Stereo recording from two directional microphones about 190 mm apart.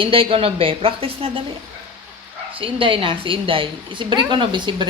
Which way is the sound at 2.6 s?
25° right (ahead or behind).